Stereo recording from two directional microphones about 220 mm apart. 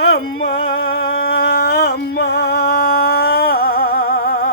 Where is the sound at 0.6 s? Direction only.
45° left (ahead or behind).